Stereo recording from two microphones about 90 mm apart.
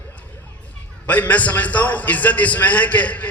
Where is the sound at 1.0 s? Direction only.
15° left (ahead or behind).